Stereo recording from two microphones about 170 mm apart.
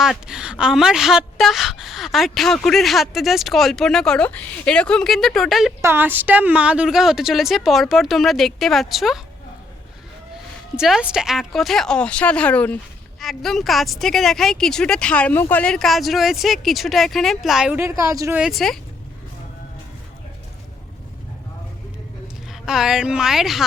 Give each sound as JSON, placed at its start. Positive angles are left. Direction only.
{"t": 0.0, "sound": "speech", "side_deg": -5}
{"t": 5.8, "sound": "speech", "side_deg": -10}
{"t": 10.8, "sound": "speech", "side_deg": -5}
{"t": 17.7, "sound": "a woman's voice", "side_deg": -15}
{"t": 18.3, "sound": "speech", "side_deg": 0}
{"t": 22.6, "sound": "speech", "side_deg": -5}